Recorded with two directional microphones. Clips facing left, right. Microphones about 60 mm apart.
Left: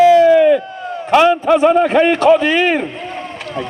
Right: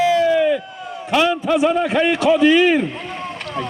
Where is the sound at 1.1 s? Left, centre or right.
Left.